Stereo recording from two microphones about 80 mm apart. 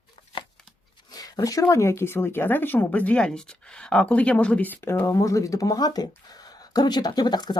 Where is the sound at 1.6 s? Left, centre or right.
Left; by 4.8 s centre.